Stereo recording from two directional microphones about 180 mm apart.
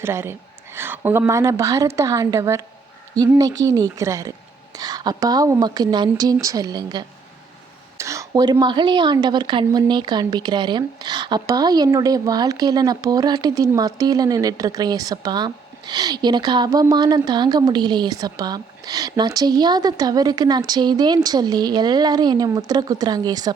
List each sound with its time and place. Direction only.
0.0 s a woman's voice: 15° right (ahead or behind)